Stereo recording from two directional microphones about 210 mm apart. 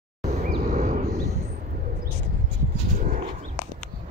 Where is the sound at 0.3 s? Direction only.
30° right (ahead or behind).